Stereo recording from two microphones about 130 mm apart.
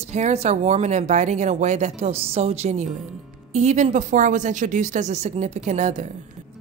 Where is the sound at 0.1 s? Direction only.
60° right (ahead or behind).